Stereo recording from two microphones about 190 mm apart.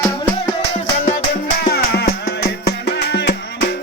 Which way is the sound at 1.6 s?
55° left (ahead or behind).